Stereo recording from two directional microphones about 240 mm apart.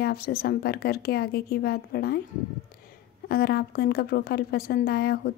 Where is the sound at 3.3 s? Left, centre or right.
Left.